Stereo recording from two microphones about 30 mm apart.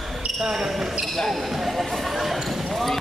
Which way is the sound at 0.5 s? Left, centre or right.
Centre.